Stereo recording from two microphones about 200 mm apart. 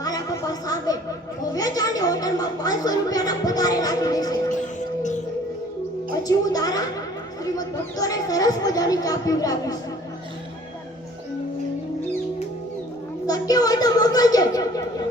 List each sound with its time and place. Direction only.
0.0 s chatter: 20° left (ahead or behind)
1.5 s a child's voice: 20° left (ahead or behind)
6.2 s a child's voice: 20° left (ahead or behind)
13.2 s a child's voice: 20° left (ahead or behind)